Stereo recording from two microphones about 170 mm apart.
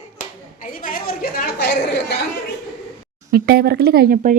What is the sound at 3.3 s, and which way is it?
Speech, 65° right (ahead or behind).